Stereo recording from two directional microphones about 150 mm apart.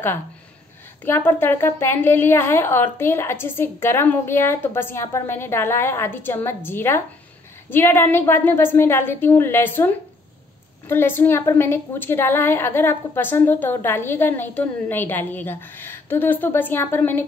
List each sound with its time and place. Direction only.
1.0 s a woman's voice: 15° left (ahead or behind)